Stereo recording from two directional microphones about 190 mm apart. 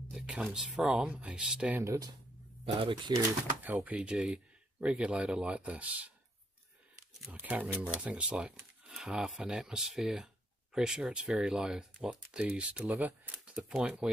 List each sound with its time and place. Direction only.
0.1 s speech: 5° right (ahead or behind)
2.6 s speech: 25° right (ahead or behind)
3.1 s speech: 15° right (ahead or behind)
7.2 s speech: 10° right (ahead or behind)